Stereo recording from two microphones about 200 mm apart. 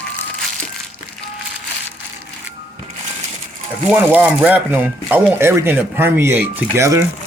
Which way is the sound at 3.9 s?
10° right (ahead or behind).